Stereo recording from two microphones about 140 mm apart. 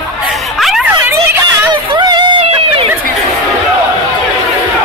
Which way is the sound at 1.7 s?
30° right (ahead or behind).